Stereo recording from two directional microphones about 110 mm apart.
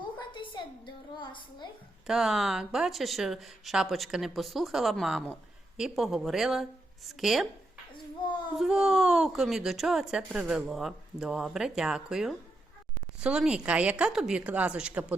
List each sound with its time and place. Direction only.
0.0 s a sound: 50° left (ahead or behind)
2.0 s speech: 5° right (ahead or behind)
8.5 s a woman's voice: 5° right (ahead or behind)